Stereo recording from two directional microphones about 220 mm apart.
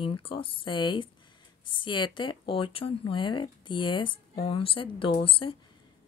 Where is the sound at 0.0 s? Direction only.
25° left (ahead or behind).